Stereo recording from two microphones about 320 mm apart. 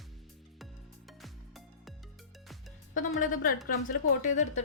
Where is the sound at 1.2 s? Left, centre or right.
Centre.